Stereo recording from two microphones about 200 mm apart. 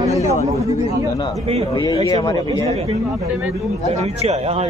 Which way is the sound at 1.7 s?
20° left (ahead or behind).